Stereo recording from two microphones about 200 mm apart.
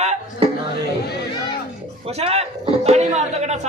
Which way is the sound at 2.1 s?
30° right (ahead or behind).